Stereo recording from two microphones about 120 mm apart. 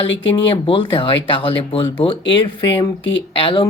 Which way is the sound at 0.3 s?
45° left (ahead or behind).